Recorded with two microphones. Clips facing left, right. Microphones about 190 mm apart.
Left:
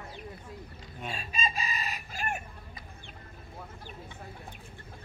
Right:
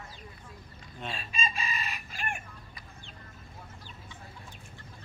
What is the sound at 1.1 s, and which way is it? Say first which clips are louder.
Chicken: left 2 dB; 40° left (ahead or behind).